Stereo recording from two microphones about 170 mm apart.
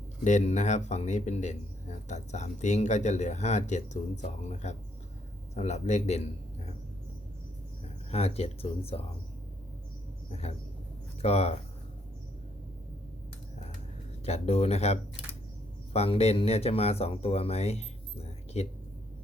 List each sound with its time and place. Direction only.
0.3 s speech: 45° left (ahead or behind)
8.1 s speech: 35° left (ahead or behind)
10.2 s speech: 35° left (ahead or behind)
14.3 s speech: 40° left (ahead or behind)